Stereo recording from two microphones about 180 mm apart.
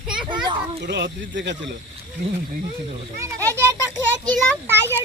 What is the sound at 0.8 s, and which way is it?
Speech, 75° right (ahead or behind).